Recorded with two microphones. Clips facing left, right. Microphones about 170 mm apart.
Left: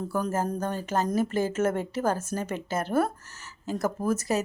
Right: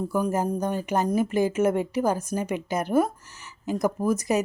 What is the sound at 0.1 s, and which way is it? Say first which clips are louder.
Speech: right 2 dB; 15° right (ahead or behind).